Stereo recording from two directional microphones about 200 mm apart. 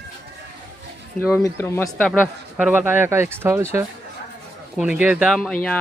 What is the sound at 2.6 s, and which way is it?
Speech, 10° right (ahead or behind).